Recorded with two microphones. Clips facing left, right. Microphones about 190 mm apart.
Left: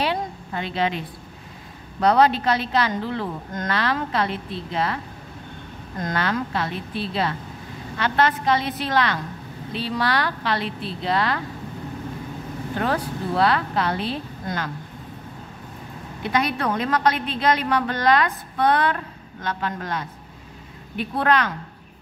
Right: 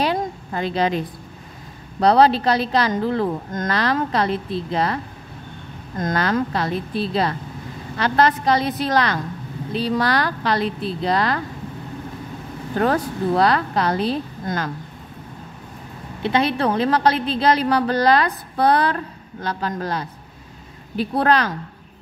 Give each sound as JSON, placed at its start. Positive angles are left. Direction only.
{"t": 0.0, "sound": "a woman's voice", "side_deg": -40}
{"t": 5.9, "sound": "a woman's voice", "side_deg": -45}
{"t": 12.8, "sound": "a woman's voice", "side_deg": -45}
{"t": 16.2, "sound": "a woman's voice", "side_deg": -30}